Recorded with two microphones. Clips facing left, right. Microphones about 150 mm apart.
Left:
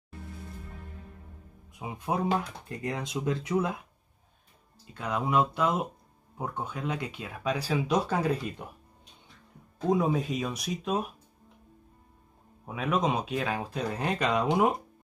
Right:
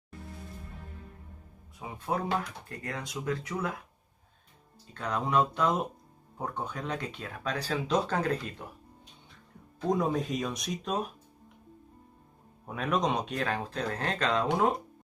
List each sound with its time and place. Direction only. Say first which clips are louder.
1.8 s speech: left 2 dB; 15° left (ahead or behind)
4.9 s speech: left 1 dB; 5° left (ahead or behind)
9.8 s speech: left 2 dB; 5° left (ahead or behind)
12.6 s speech: left 1 dB; 5° left (ahead or behind)